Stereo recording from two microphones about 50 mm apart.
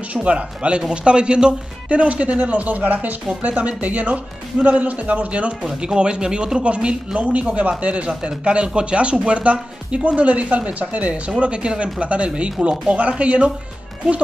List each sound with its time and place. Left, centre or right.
0.1 s speech: right